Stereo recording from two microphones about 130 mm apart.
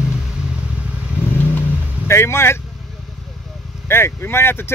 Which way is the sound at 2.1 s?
20° left (ahead or behind).